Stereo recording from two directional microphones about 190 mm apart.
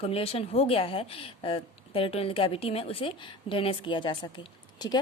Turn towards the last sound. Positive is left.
turn(degrees=20)  # may be behind; listen again after turning